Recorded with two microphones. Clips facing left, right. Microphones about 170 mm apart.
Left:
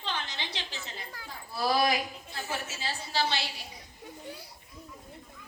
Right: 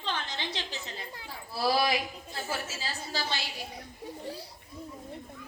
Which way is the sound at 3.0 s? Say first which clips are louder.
Left 6 dB; 45° right (ahead or behind).